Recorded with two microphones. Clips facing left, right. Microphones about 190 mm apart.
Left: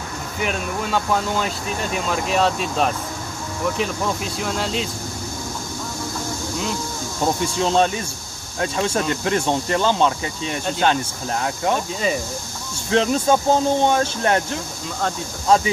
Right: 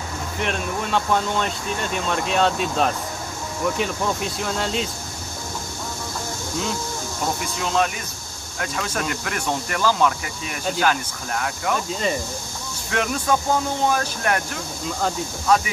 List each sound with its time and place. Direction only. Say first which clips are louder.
0.4 s speech: left 1 dB; 5° left (ahead or behind)
7.6 s speech: left 4 dB; 30° left (ahead or behind)
12.9 s speech: left 5 dB; 30° left (ahead or behind)